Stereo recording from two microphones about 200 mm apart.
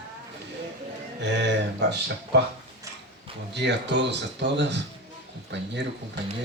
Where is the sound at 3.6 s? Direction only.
60° right (ahead or behind).